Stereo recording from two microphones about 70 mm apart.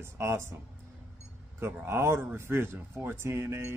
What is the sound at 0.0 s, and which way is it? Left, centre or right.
Speech, right.